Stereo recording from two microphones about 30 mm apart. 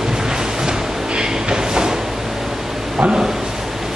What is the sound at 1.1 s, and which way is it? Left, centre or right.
Sliding door, right.